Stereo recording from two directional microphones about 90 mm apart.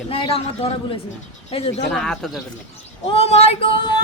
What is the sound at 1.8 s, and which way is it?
Speech, 5° left (ahead or behind).